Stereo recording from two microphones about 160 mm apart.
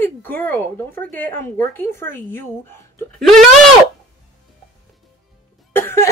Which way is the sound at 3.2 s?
Centre (ahead or behind).